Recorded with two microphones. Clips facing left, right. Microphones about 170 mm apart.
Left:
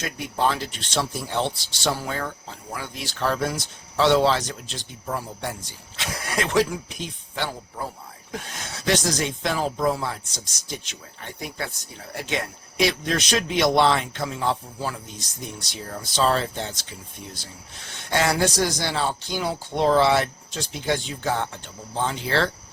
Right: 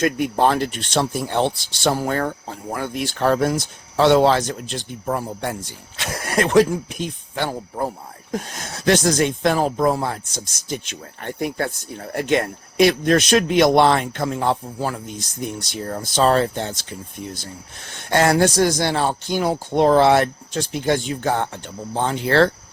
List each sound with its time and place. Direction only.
0.0 s speech: 55° right (ahead or behind)